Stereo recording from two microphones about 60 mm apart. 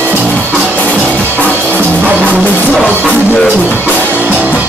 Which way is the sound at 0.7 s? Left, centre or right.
Left.